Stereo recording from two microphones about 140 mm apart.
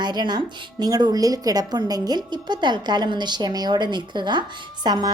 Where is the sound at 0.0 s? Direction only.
30° right (ahead or behind).